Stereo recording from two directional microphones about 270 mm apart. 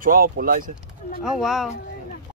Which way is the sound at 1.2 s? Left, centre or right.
Centre.